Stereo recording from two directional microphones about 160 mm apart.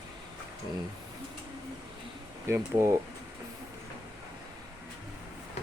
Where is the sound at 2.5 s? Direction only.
20° right (ahead or behind).